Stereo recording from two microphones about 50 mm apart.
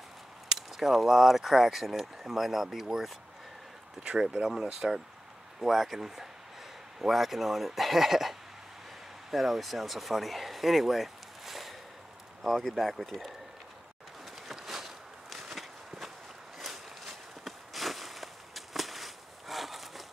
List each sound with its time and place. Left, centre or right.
0.5 s speech: centre
4.0 s speech: centre
14.5 s walk: centre